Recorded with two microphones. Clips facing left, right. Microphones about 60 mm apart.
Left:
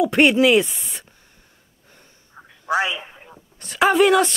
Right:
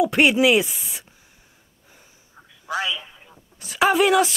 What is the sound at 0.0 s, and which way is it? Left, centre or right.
Speech, centre.